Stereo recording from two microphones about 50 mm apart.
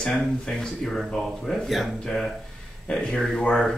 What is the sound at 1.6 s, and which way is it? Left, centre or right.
Speech, centre.